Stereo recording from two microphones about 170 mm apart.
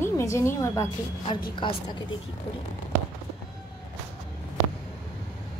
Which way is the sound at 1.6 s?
30° left (ahead or behind).